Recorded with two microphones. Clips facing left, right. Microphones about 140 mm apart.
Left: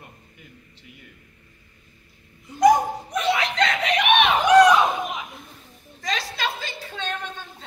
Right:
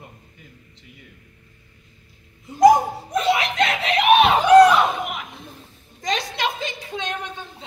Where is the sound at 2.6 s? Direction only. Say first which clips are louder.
Right 3 dB; 30° right (ahead or behind).